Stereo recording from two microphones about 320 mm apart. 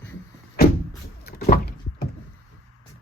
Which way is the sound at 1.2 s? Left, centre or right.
Left.